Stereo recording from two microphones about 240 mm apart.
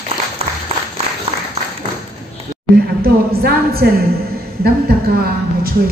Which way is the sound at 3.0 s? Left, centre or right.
Right.